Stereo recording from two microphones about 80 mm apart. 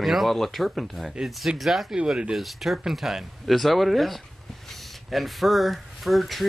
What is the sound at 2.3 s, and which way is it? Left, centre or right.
Speech, centre.